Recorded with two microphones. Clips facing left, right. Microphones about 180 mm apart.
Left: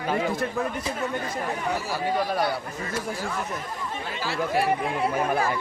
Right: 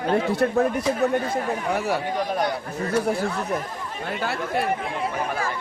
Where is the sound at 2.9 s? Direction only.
60° right (ahead or behind).